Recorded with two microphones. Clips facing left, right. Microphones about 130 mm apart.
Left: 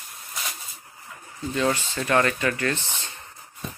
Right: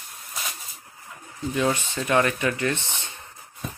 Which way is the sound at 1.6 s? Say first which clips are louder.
Even; 15° right (ahead or behind).